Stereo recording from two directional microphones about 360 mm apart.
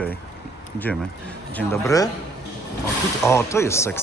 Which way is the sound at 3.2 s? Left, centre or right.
Centre.